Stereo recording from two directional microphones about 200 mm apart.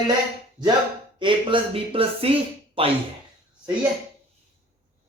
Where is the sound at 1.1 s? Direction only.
25° right (ahead or behind).